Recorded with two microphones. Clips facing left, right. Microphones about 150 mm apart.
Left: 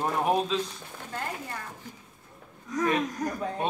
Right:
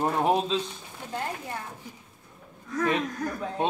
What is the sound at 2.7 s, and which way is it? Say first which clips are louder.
Speech: even; 20° left (ahead or behind).